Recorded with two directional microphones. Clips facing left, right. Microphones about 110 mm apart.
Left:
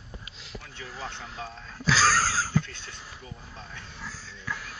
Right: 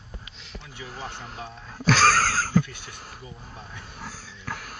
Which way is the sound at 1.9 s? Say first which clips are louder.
Right 3 dB; 55° right (ahead or behind).